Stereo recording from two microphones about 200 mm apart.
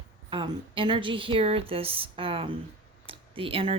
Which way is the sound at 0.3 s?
25° right (ahead or behind).